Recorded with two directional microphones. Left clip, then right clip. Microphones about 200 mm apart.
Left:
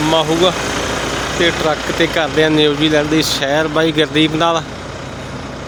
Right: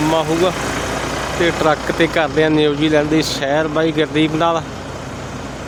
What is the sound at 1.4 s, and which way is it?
Speech, 10° right (ahead or behind).